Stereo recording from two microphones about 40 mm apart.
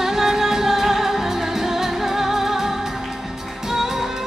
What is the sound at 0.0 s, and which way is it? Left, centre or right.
Music, centre.